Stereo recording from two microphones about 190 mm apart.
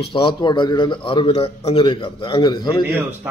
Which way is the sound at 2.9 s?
10° right (ahead or behind).